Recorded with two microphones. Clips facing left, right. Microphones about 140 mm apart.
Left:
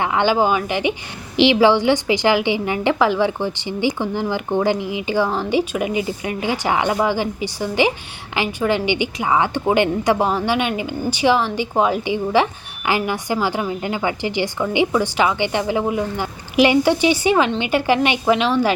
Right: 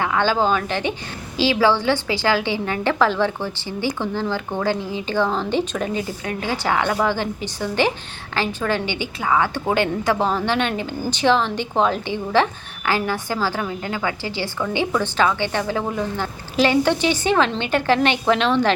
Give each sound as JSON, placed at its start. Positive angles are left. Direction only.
{"t": 0.0, "sound": "a woman's voice", "side_deg": 20}